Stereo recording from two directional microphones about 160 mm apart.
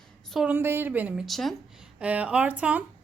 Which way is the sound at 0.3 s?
Centre (ahead or behind).